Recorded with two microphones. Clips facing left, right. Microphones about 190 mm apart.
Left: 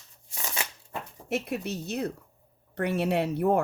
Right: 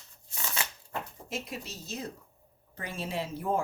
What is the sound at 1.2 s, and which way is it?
Speech, 60° left (ahead or behind).